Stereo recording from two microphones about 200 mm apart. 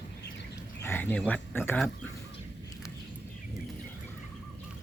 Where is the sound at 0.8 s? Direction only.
10° left (ahead or behind).